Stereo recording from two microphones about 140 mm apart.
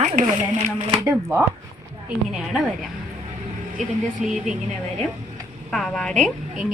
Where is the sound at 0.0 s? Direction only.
65° right (ahead or behind).